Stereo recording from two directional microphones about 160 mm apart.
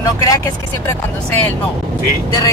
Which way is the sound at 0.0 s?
20° left (ahead or behind).